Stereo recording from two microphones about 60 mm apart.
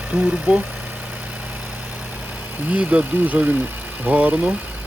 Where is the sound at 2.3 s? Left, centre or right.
Right.